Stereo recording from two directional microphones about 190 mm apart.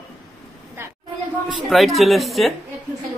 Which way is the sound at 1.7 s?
Centre (ahead or behind).